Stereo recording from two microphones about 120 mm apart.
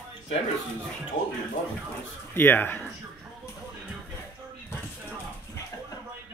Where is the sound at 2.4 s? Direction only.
15° left (ahead or behind).